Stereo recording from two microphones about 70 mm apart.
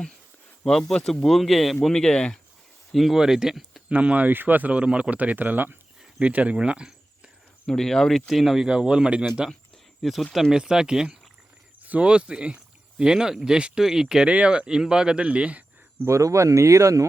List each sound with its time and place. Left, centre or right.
0.6 s speech: centre
2.9 s speech: centre
3.8 s speech: centre
7.7 s speech: centre
10.0 s speech: centre
11.8 s speech: right
16.0 s speech: right